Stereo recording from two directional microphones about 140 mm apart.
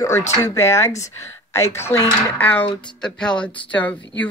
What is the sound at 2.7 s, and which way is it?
Speech, 35° left (ahead or behind).